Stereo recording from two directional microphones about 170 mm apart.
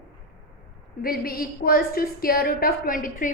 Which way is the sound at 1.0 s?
60° left (ahead or behind).